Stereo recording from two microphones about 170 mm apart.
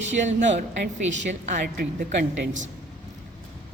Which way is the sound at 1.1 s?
90° right.